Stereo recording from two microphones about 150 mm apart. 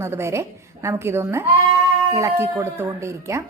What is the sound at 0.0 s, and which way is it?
A woman's voice, 15° right (ahead or behind).